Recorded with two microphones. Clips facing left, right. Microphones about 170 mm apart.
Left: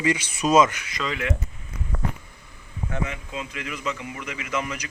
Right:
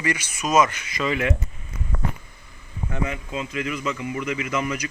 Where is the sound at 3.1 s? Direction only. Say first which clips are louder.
Right 4 dB; 45° right (ahead or behind).